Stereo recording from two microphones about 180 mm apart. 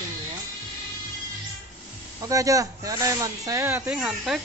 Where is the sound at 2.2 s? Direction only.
20° right (ahead or behind).